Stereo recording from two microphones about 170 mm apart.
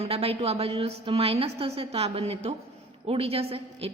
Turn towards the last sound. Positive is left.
turn(degrees=-35)  # may be behind; listen again after turning